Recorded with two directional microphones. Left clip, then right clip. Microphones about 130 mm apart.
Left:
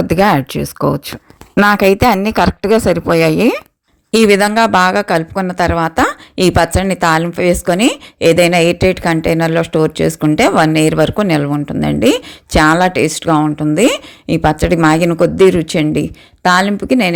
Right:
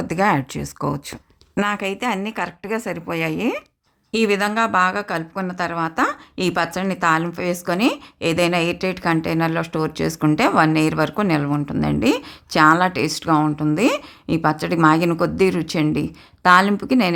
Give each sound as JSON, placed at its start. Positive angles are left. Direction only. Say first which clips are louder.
{"t": 0.0, "sound": "a woman's voice", "louder": "left 7 dB", "side_deg": 25}
{"t": 1.6, "sound": "a woman's voice", "louder": "left 13 dB", "side_deg": 45}